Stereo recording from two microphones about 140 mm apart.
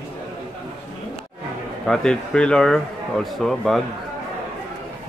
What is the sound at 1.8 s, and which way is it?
Speech, 5° left (ahead or behind).